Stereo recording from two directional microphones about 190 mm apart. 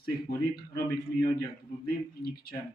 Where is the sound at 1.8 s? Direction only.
55° left (ahead or behind).